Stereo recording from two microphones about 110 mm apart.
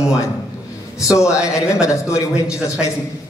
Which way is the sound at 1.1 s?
30° left (ahead or behind).